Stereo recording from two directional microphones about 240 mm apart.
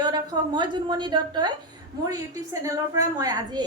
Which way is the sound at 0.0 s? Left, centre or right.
Centre.